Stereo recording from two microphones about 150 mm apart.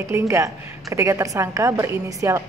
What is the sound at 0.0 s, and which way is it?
A woman's voice, 20° right (ahead or behind).